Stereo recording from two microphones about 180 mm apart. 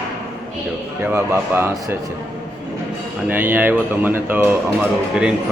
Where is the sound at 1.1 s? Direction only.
15° right (ahead or behind).